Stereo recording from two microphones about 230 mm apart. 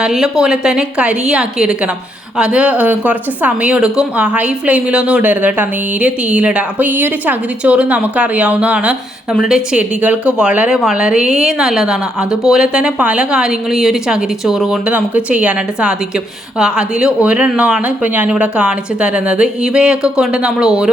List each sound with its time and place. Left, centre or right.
0.0 s speech: centre